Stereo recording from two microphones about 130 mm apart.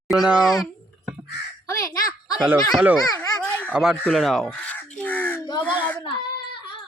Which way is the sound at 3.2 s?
10° left (ahead or behind).